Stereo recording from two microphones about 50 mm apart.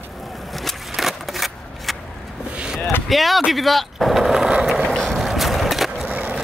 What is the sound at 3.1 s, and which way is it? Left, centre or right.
Speech, centre.